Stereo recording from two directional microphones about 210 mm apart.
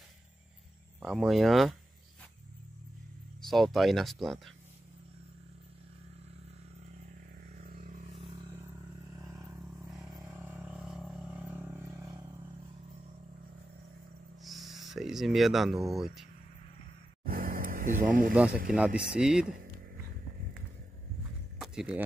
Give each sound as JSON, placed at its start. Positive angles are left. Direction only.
{"t": 1.0, "sound": "speech", "side_deg": 0}
{"t": 3.4, "sound": "speech", "side_deg": 0}
{"t": 7.5, "sound": "vehicle", "side_deg": -40}
{"t": 8.2, "sound": "vehicle", "side_deg": -25}
{"t": 9.1, "sound": "vehicle", "side_deg": -10}
{"t": 10.1, "sound": "a sound", "side_deg": -10}
{"t": 14.4, "sound": "speech", "side_deg": 0}
{"t": 17.2, "sound": "a sound", "side_deg": -45}
{"t": 18.3, "sound": "speech", "side_deg": -5}
{"t": 21.5, "sound": "a sound", "side_deg": -5}